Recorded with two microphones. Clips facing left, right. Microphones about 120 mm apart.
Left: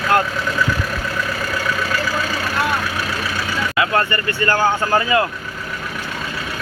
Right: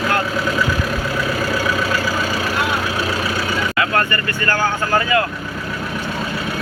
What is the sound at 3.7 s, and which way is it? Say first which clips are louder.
Speech: left 3 dB; 20° left (ahead or behind).